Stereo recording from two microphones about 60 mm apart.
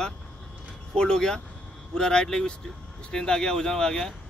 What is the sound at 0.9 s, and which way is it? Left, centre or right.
Speech, centre.